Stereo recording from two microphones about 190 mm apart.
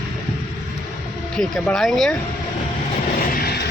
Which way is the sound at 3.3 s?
55° left (ahead or behind).